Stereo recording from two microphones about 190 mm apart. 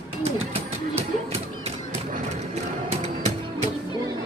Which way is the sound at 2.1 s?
35° right (ahead or behind).